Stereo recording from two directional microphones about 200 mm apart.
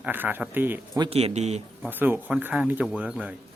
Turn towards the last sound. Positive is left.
turn(degrees=-5)  # may be behind; listen again after turning